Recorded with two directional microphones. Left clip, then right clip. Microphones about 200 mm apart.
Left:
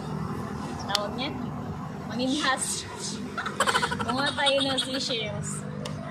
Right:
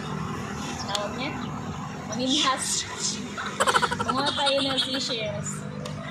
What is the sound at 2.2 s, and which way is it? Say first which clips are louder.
Speech: right 2 dB; 5° left (ahead or behind).